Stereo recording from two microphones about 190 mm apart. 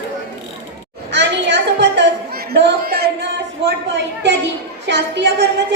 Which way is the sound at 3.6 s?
65° right (ahead or behind).